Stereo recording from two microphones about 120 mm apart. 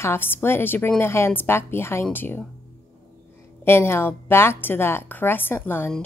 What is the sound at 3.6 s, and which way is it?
Speech, 20° left (ahead or behind).